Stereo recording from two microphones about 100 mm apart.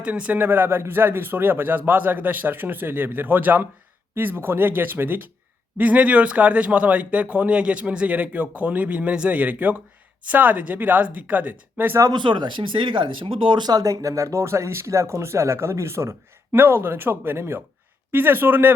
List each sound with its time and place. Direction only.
0.0 s a man's voice: 15° right (ahead or behind)
12.1 s speech: 50° right (ahead or behind); by 18.7 s 20° right (ahead or behind)